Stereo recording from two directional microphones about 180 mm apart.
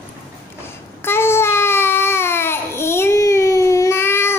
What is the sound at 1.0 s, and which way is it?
Babbling, 15° left (ahead or behind).